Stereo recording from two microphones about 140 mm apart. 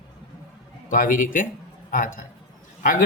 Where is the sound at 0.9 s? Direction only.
75° left (ahead or behind).